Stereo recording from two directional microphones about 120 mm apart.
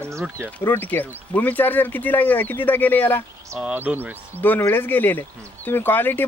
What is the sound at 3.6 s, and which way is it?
Speech, 10° right (ahead or behind).